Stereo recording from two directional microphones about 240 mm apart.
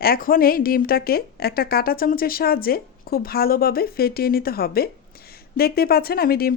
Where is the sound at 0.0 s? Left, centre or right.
Left.